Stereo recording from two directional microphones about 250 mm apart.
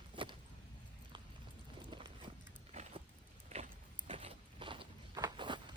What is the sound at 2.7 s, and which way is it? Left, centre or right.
Vehicle, right.